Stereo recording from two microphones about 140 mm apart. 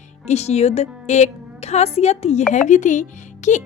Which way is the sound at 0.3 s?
50° left (ahead or behind).